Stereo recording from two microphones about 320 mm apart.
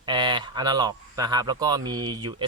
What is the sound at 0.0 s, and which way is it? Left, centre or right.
Speech, centre.